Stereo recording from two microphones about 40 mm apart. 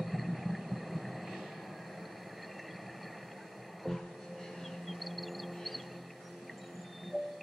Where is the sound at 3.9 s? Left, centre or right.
Centre.